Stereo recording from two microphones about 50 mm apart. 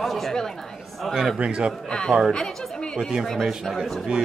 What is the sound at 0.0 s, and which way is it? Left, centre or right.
Speech, centre.